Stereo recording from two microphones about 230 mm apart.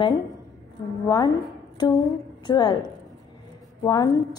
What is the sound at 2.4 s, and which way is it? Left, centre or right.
A woman's voice, centre.